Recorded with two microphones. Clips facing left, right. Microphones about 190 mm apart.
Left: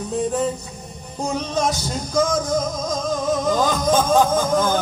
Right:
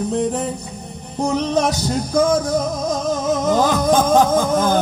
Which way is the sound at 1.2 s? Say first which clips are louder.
Right 4 dB; 65° right (ahead or behind).